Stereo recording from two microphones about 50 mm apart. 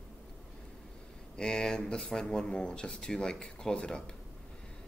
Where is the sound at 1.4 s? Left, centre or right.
Centre.